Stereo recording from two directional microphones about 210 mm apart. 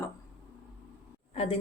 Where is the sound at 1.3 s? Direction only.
25° left (ahead or behind).